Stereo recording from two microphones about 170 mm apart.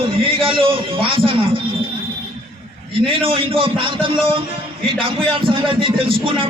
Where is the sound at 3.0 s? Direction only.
35° right (ahead or behind).